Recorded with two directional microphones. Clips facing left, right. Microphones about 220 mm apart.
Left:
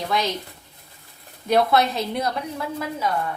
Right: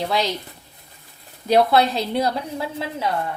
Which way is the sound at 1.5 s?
30° right (ahead or behind).